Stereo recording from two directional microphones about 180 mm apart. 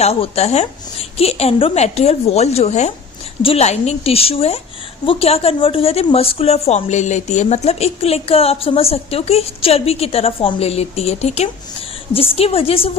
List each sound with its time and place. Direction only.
0.0 s a woman's voice: 35° left (ahead or behind)